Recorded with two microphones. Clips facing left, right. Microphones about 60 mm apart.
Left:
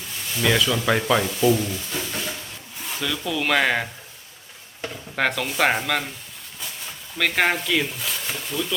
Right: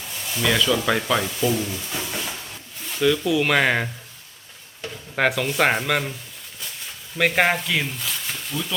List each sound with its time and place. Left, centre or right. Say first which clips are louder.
0.4 s speech: even; centre
5.1 s speech: right 3 dB; centre
7.2 s speech: right 2 dB; centre